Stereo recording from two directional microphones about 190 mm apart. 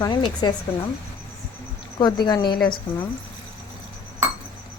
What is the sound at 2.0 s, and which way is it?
Speech, 25° left (ahead or behind).